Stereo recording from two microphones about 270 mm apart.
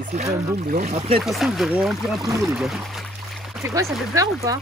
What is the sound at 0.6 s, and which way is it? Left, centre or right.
Speech, right.